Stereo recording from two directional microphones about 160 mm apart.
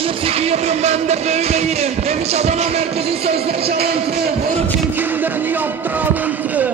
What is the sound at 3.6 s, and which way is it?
Music, 75° right (ahead or behind).